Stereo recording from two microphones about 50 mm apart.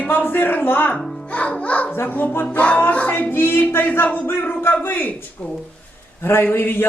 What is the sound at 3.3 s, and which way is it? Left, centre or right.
A man's voice, left.